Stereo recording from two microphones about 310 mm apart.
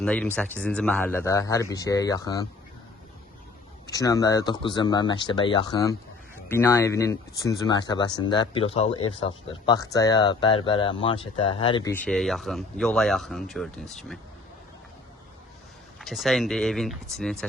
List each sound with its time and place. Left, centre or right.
0.0 s speech: centre
3.8 s speech: centre
16.0 s speech: centre